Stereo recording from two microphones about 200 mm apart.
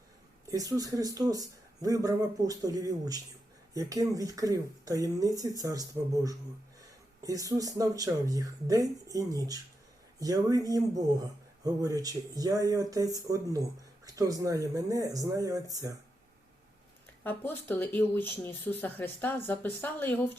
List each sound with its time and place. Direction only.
0.4 s speech: 15° right (ahead or behind)
17.2 s speech: 10° left (ahead or behind)